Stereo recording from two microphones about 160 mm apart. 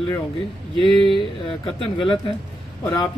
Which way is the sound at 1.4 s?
35° left (ahead or behind).